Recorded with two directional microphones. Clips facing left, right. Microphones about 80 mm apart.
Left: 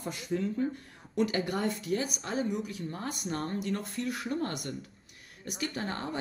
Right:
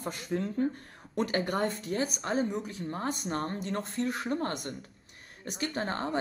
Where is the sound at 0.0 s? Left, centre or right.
Right.